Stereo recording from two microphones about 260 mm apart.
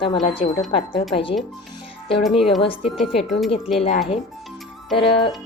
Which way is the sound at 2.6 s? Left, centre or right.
Left.